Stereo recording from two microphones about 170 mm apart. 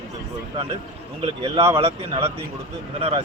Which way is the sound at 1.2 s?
35° right (ahead or behind).